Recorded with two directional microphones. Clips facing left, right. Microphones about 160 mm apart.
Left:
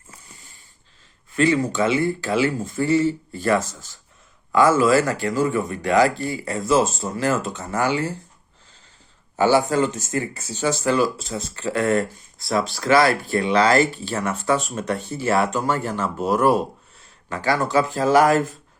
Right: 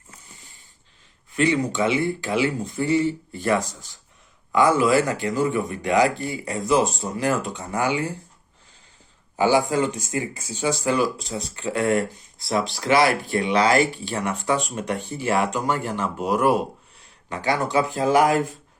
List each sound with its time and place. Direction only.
1.7 s speech: 20° right (ahead or behind)
9.4 s speech: 15° right (ahead or behind)